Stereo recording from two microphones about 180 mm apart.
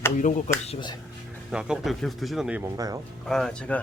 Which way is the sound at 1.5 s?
5° right (ahead or behind).